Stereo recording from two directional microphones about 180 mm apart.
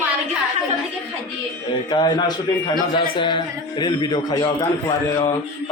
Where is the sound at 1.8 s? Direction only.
25° left (ahead or behind).